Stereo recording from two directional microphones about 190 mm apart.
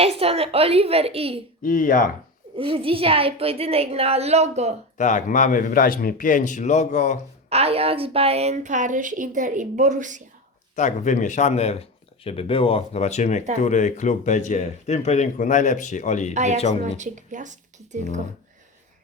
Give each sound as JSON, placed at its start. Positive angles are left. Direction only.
{"t": 0.0, "sound": "a woman's voice", "side_deg": -30}
{"t": 1.6, "sound": "speech", "side_deg": 45}
{"t": 2.6, "sound": "a woman's voice", "side_deg": -30}
{"t": 4.9, "sound": "speech", "side_deg": 40}
{"t": 7.5, "sound": "a woman's voice", "side_deg": -30}
{"t": 10.8, "sound": "speech", "side_deg": 40}
{"t": 16.3, "sound": "a woman's voice", "side_deg": -35}